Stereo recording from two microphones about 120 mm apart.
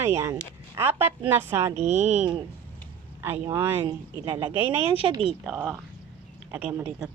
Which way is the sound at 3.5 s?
15° right (ahead or behind).